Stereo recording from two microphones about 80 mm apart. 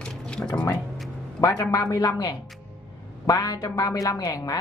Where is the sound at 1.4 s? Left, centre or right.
Left.